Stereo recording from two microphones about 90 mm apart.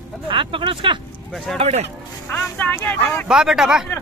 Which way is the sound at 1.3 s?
Centre (ahead or behind).